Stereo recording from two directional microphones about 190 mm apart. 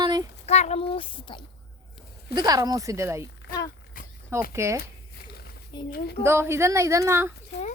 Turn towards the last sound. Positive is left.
turn(degrees=65)  # may be behind; listen again after turning